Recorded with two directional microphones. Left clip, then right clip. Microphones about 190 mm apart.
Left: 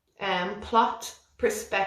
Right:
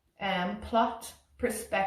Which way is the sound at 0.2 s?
20° left (ahead or behind).